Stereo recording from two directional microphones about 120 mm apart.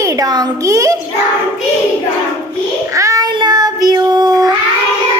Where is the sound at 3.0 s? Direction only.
30° right (ahead or behind).